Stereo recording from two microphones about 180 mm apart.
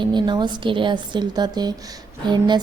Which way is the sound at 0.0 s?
25° right (ahead or behind).